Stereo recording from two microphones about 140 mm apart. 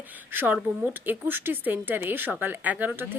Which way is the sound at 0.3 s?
15° right (ahead or behind).